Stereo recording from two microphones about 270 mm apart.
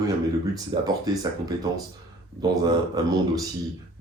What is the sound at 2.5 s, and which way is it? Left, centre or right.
Speech, centre.